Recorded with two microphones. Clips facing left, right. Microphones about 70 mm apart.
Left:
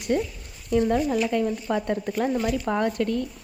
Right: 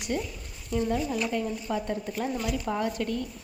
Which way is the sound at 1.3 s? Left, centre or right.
Left.